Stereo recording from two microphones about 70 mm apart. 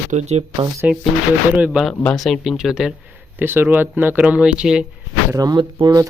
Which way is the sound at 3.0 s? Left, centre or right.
Right.